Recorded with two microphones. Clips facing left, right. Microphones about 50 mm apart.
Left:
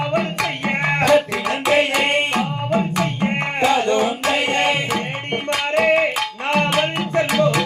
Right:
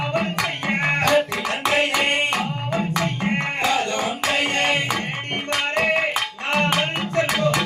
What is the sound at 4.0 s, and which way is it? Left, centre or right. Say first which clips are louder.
Music: left 3 dB; centre.